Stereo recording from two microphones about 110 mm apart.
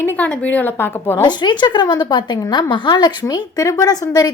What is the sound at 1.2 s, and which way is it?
A woman's voice, 40° left (ahead or behind).